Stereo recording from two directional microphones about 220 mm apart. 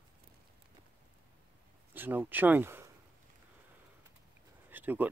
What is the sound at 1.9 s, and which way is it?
Speech, 10° right (ahead or behind).